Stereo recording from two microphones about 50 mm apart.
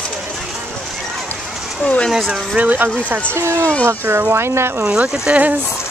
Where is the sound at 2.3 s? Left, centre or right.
Right.